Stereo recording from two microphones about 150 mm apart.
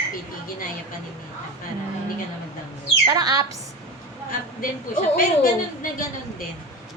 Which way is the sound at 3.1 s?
25° right (ahead or behind).